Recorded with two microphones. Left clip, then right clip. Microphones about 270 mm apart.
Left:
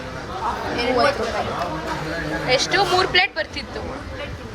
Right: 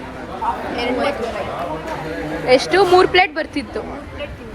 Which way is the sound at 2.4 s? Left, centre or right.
Right.